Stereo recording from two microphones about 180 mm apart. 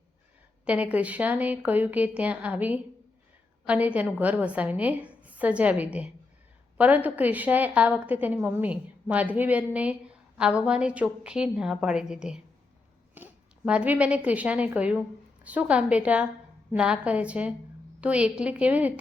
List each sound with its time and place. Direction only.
0.6 s a woman's voice: 5° right (ahead or behind)
13.2 s a sound: 10° right (ahead or behind)
13.7 s a woman's voice: 5° right (ahead or behind)